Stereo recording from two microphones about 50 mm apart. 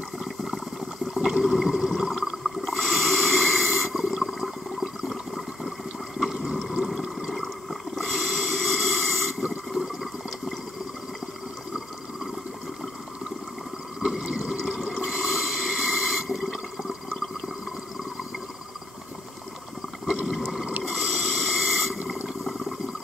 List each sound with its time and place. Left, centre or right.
0.2 s boiling: centre
1.1 s a sound: centre
2.6 s snort: centre
6.3 s water: centre
7.9 s snort: centre
14.0 s a sound: centre
14.7 s snort: centre
20.1 s water: centre
20.3 s a sound: centre
20.8 s snort: centre
21.9 s water: centre
22.4 s toilet flush: centre